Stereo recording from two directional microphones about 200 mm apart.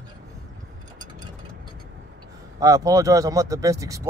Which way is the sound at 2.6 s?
15° right (ahead or behind).